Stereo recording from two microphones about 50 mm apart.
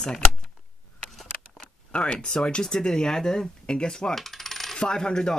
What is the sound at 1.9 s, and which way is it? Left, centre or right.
A woman's voice, centre.